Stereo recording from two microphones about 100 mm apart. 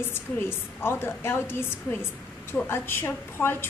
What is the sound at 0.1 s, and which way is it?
A woman's voice, 25° left (ahead or behind).